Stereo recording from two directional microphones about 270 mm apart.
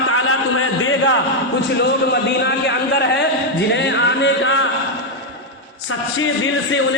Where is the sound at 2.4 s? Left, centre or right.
Left.